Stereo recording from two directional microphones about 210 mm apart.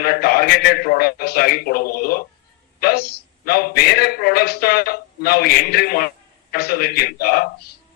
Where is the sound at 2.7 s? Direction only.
50° left (ahead or behind).